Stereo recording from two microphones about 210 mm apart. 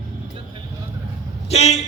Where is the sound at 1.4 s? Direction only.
30° left (ahead or behind).